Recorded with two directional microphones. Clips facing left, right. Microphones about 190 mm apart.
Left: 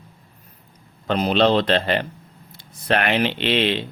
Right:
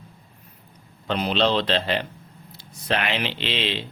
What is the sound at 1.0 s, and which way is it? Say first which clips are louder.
Speech: left 4 dB; 45° left (ahead or behind).